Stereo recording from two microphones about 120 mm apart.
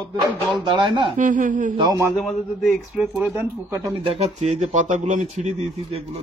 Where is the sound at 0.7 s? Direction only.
45° right (ahead or behind).